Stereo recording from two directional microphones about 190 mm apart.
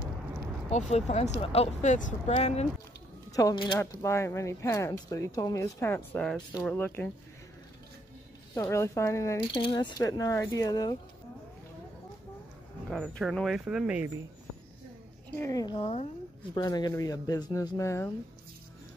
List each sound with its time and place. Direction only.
0.7 s speech: 35° left (ahead or behind)
3.3 s speech: 20° left (ahead or behind)
8.5 s speech: 15° left (ahead or behind)
9.5 s speech: 25° left (ahead or behind)
12.9 s speech: centre (ahead or behind)
15.3 s speech: 15° left (ahead or behind)
16.5 s speech: 20° left (ahead or behind)